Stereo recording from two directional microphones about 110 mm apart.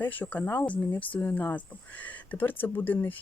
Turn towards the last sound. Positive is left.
turn(degrees=15)  # may be behind; listen again after turning